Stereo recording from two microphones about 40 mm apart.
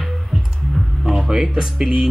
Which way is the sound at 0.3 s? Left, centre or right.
Centre.